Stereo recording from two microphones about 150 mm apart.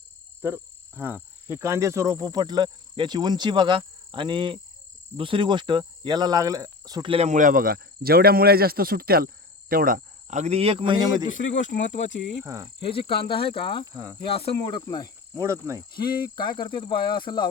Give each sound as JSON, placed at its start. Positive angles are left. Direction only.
{"t": 0.4, "sound": "speech", "side_deg": -15}
{"t": 11.3, "sound": "speech", "side_deg": 60}
{"t": 12.9, "sound": "speech", "side_deg": 35}
{"t": 13.8, "sound": "speech", "side_deg": -25}
{"t": 14.2, "sound": "cricket", "side_deg": 30}
{"t": 15.4, "sound": "speech", "side_deg": -20}
{"t": 16.3, "sound": "speech", "side_deg": 30}